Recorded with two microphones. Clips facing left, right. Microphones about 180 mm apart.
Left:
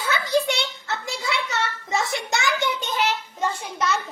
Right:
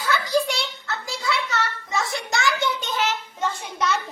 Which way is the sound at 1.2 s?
25° left (ahead or behind).